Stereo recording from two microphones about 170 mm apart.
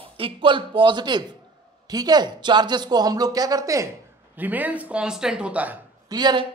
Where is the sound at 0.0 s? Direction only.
30° right (ahead or behind); by 5.8 s 10° right (ahead or behind).